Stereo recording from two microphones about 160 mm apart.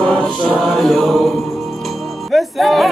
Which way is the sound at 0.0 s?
5° left (ahead or behind).